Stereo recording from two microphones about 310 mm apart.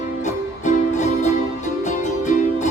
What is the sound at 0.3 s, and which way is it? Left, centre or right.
Music, left.